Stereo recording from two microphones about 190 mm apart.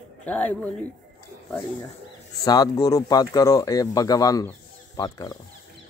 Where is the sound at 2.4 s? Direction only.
20° left (ahead or behind).